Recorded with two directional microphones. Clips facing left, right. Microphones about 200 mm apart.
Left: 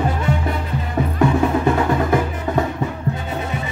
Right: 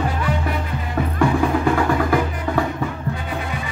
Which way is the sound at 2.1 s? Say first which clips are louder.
Left 1 dB; 20° left (ahead or behind).